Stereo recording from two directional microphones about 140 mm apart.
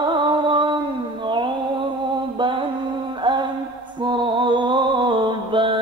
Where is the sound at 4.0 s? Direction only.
35° right (ahead or behind).